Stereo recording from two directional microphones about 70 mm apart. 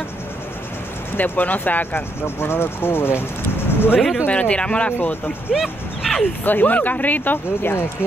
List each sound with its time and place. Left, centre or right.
1.1 s speech: left
4.3 s speech: centre
4.9 s speech: left
5.5 s speech: centre
6.4 s speech: left